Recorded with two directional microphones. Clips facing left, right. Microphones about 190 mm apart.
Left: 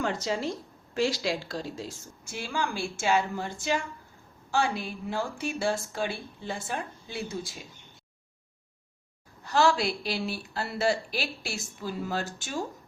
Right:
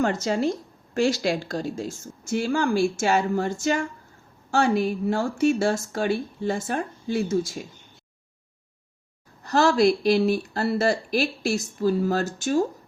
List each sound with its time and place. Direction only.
0.0 s speech: 45° right (ahead or behind)
9.4 s speech: 40° right (ahead or behind)